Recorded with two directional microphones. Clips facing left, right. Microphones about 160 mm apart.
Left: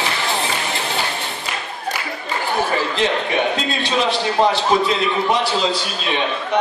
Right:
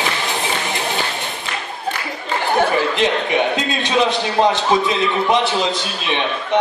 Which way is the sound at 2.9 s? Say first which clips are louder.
Right 2 dB; 20° right (ahead or behind).